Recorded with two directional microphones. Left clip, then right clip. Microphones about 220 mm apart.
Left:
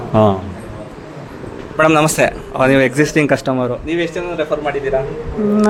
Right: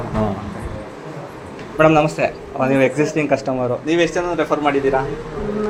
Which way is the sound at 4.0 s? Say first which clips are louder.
Right 2 dB; 30° right (ahead or behind).